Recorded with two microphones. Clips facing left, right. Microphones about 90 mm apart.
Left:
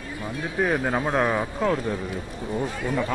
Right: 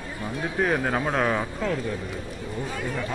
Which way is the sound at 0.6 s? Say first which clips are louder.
Left 1 dB; centre (ahead or behind).